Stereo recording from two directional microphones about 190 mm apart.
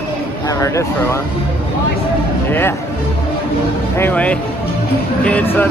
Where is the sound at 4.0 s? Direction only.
10° left (ahead or behind).